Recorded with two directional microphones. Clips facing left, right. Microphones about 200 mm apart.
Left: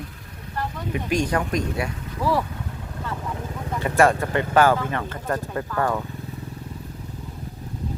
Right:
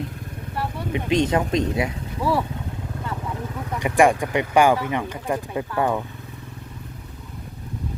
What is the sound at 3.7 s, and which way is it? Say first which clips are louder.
Speech: right 1 dB; 15° right (ahead or behind).